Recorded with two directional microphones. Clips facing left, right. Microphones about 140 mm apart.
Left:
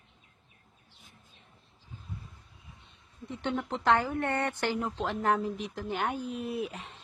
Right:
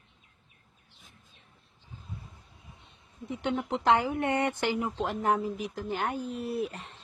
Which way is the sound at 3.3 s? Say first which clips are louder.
Right 2 dB; 15° right (ahead or behind).